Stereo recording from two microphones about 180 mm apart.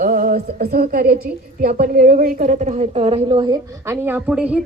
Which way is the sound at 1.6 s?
50° right (ahead or behind).